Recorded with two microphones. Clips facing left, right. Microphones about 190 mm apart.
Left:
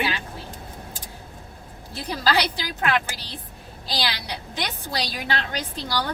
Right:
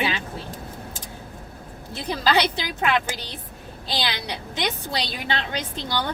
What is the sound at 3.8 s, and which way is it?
A woman's voice, 20° right (ahead or behind).